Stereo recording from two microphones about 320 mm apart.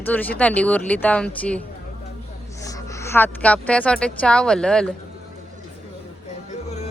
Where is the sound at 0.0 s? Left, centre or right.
Centre.